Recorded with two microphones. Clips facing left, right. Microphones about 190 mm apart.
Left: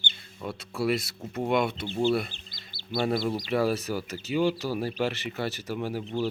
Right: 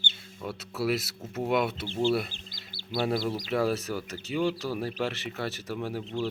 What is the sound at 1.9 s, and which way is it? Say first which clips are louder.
Speech: left 1 dB; 20° left (ahead or behind).